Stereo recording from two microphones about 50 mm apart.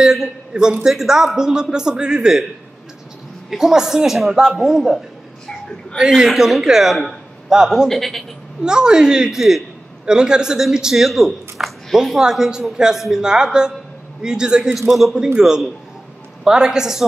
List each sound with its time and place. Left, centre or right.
0.5 s a man's voice: centre
0.8 s speech: centre
3.4 s speech: centre
7.9 s a man's voice: centre
8.6 s a man's voice: centre
14.8 s a man's voice: centre
15.3 s speech: centre